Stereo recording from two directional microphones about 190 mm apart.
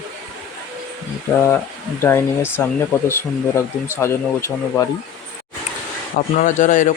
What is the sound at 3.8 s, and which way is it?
Speech, 15° left (ahead or behind).